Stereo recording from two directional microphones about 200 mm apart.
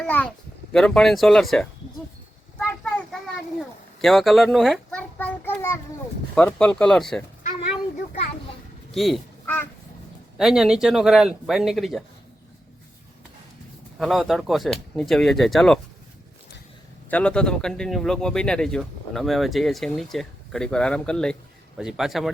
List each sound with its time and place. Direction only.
0.0 s speech: 5° left (ahead or behind)
4.0 s a sound: centre (ahead or behind)
6.3 s speech: 5° left (ahead or behind)
8.9 s a sound: centre (ahead or behind)
10.3 s speech: centre (ahead or behind)
14.0 s speech: centre (ahead or behind)
17.1 s speech: 5° left (ahead or behind)